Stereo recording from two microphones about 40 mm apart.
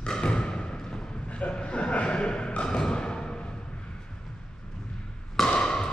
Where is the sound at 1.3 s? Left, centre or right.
Left.